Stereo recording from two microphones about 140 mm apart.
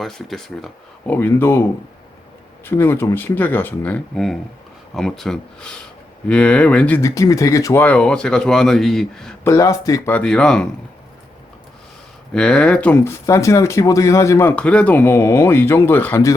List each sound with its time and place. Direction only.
0.0 s speech: centre (ahead or behind); by 1.6 s 15° left (ahead or behind)
2.6 s speech: 15° left (ahead or behind)
7.0 s speech: 20° left (ahead or behind); by 9.3 s 5° left (ahead or behind)
9.4 s speech: 20° left (ahead or behind)
10.1 s speech: 10° left (ahead or behind)
12.3 s speech: 5° left (ahead or behind)